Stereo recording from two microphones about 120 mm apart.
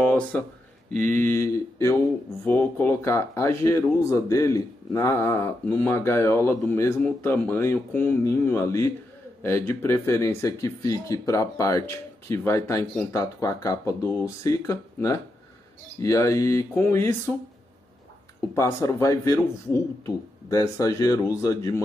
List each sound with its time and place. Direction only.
0.0 s a sound: 15° left (ahead or behind)
0.9 s speech: 15° left (ahead or behind)
18.5 s speech: 25° left (ahead or behind)